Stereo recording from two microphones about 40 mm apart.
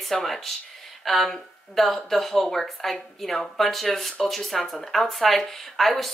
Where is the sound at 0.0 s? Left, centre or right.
Centre.